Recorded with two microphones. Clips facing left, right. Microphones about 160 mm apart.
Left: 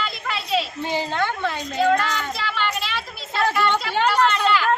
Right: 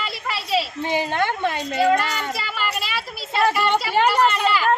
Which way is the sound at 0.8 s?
15° right (ahead or behind).